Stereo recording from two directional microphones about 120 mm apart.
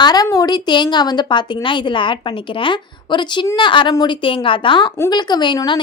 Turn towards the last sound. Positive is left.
turn(degrees=40)  # may be behind; listen again after turning